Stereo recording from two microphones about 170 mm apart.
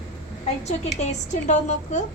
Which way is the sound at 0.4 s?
40° left (ahead or behind).